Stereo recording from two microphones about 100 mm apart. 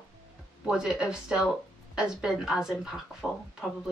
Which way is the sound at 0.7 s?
10° right (ahead or behind).